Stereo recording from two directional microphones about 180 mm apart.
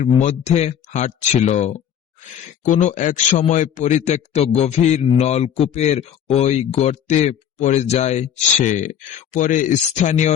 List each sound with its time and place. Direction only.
0.0 s speech: 40° left (ahead or behind)